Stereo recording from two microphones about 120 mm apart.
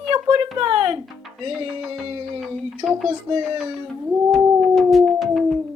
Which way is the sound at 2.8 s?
30° right (ahead or behind).